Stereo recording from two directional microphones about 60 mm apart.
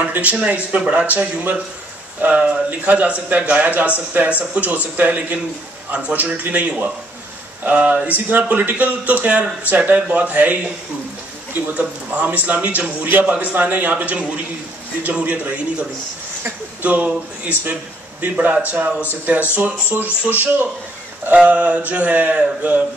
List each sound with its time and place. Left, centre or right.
0.0 s a man's voice: right
11.6 s a man's voice: right
16.8 s a man's voice: right
21.3 s a man's voice: right